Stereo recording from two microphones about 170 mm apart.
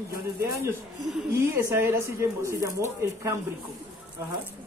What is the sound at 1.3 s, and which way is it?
Music, 15° right (ahead or behind).